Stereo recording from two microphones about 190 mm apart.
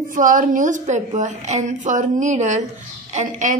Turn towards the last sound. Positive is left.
turn(degrees=-40)  # may be behind; listen again after turning